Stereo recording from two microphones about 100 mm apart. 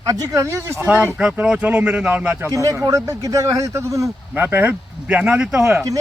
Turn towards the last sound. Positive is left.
turn(degrees=-5)  # may be behind; listen again after turning